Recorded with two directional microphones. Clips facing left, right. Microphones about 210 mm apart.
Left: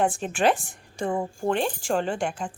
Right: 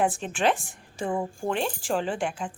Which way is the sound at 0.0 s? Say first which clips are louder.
Left 2 dB; centre (ahead or behind).